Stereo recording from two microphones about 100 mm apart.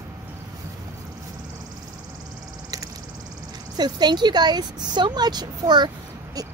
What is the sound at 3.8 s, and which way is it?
Speech, 45° right (ahead or behind).